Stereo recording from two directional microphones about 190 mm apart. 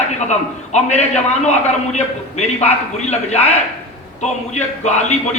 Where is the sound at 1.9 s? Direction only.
35° left (ahead or behind).